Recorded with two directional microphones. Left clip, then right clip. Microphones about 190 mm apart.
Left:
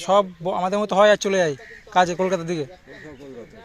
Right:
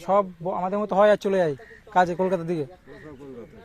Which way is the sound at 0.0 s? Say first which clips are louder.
Left 3 dB; 5° left (ahead or behind).